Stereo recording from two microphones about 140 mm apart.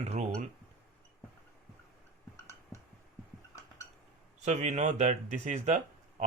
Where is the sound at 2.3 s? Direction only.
20° left (ahead or behind).